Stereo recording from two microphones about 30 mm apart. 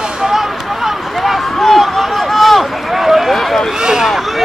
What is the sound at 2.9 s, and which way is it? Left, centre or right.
Run, centre.